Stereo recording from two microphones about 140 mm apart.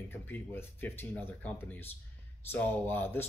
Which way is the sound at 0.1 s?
15° left (ahead or behind).